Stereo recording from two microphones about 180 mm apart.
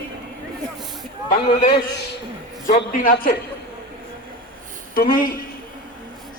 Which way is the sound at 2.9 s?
50° left (ahead or behind).